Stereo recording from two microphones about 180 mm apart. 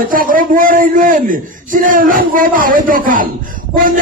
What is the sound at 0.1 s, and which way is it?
A man's voice, 50° right (ahead or behind).